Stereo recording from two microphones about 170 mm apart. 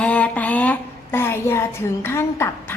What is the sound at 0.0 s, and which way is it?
A woman's voice, 10° left (ahead or behind).